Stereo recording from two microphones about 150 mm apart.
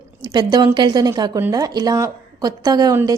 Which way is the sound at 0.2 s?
25° right (ahead or behind).